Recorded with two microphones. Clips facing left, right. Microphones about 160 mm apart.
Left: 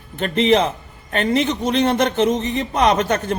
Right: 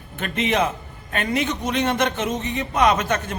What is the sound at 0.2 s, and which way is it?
Speech, 35° left (ahead or behind).